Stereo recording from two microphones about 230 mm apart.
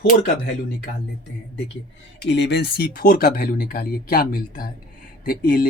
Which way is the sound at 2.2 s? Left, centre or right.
Left.